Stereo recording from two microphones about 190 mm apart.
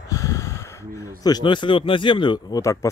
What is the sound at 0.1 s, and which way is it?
Speech, 15° left (ahead or behind).